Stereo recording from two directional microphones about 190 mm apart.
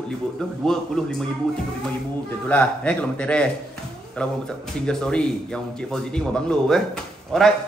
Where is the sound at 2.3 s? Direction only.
5° left (ahead or behind).